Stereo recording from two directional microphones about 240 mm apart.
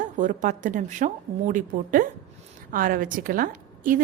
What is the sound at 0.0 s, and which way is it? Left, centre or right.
A woman's voice, right.